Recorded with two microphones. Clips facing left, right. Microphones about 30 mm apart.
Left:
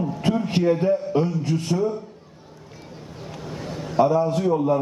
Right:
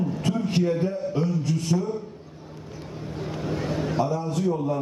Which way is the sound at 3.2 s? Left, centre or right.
Centre.